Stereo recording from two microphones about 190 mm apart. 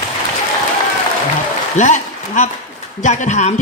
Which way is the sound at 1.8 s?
40° left (ahead or behind).